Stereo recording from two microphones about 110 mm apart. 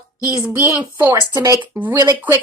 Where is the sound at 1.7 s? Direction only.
20° right (ahead or behind).